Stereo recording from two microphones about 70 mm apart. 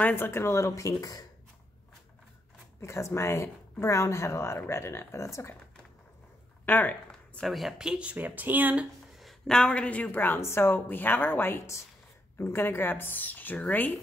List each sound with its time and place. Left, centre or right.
0.0 s speech: left
2.8 s speech: left
6.6 s speech: left
7.4 s speech: centre
8.1 s speech: right
9.2 s a woman's voice: centre